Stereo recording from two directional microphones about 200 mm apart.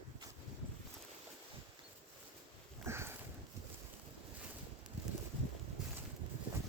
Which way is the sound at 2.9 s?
15° right (ahead or behind).